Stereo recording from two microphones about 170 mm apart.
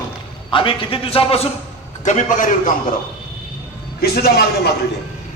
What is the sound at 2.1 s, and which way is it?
Speech, 45° left (ahead or behind).